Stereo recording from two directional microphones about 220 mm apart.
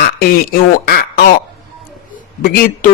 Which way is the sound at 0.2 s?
45° left (ahead or behind).